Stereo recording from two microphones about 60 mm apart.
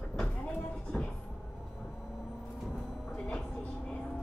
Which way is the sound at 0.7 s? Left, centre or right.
Centre.